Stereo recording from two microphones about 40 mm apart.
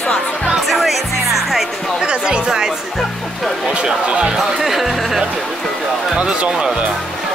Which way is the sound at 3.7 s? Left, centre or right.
Right.